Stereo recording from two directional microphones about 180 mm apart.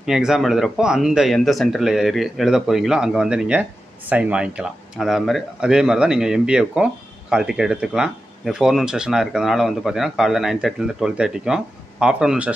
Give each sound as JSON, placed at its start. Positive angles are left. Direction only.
{"t": 0.0, "sound": "speech", "side_deg": -5}